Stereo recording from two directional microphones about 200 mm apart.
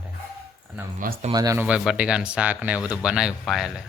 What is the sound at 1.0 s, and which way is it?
Speech, 45° right (ahead or behind).